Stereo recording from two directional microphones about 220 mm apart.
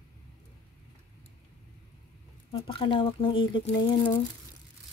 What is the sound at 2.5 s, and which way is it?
Speech, 25° left (ahead or behind).